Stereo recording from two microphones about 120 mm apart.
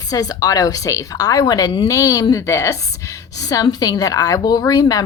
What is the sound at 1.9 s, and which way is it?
A woman's voice, 25° left (ahead or behind).